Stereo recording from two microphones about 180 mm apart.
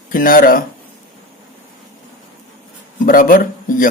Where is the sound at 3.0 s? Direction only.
50° left (ahead or behind).